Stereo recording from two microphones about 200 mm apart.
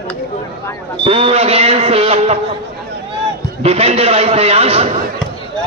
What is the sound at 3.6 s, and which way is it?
A man's voice, 30° right (ahead or behind).